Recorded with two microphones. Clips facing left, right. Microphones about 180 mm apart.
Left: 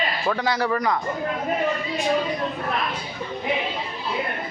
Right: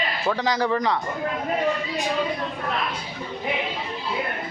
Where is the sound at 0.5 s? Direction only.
15° right (ahead or behind).